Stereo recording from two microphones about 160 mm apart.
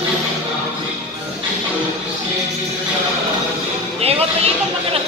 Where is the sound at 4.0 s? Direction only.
40° right (ahead or behind).